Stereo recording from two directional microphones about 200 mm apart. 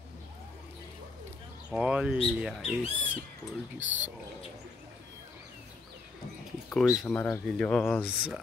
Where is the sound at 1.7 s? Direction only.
5° right (ahead or behind).